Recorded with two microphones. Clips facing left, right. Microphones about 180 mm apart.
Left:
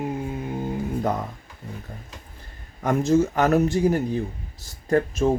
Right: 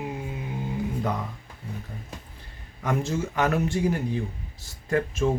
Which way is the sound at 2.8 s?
45° left (ahead or behind).